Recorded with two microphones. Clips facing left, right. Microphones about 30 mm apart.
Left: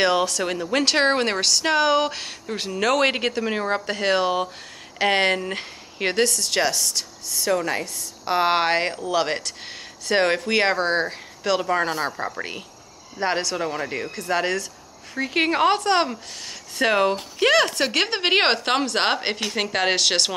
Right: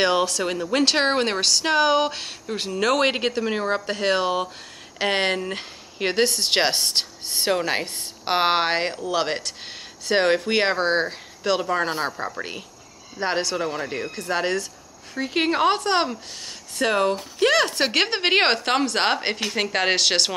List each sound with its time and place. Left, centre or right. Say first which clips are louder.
0.0 s speech: even; centre
6.2 s a woman's voice: right 1 dB; right
8.5 s speech: left 2 dB; centre
16.7 s speech: left 1 dB; centre
17.7 s speech: right 1 dB; centre